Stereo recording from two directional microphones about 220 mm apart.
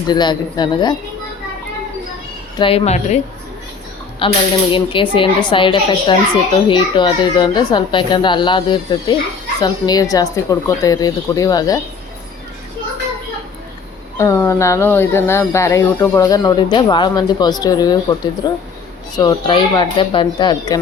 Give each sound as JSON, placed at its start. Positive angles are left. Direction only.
{"t": 0.1, "sound": "speech", "side_deg": 20}
{"t": 2.6, "sound": "speech", "side_deg": 25}
{"t": 4.2, "sound": "speech", "side_deg": 25}
{"t": 14.2, "sound": "speech", "side_deg": 15}